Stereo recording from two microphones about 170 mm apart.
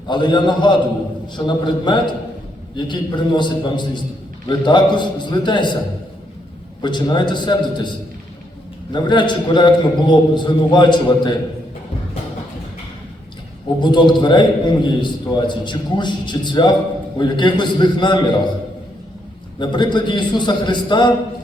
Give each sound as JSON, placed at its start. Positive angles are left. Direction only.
{"t": 0.1, "sound": "a man's voice", "side_deg": 25}
{"t": 6.8, "sound": "a man's voice", "side_deg": 25}
{"t": 13.8, "sound": "a man's voice", "side_deg": 25}
{"t": 19.5, "sound": "a man's voice", "side_deg": 25}